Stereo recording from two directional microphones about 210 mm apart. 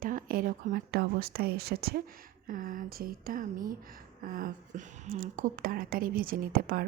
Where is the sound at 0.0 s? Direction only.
40° right (ahead or behind).